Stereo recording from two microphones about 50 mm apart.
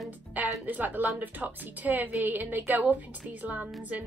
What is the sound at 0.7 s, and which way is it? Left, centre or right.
A woman's voice, right.